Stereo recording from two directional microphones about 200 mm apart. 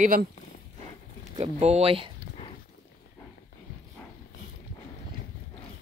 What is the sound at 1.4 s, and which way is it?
Speech, 30° right (ahead or behind).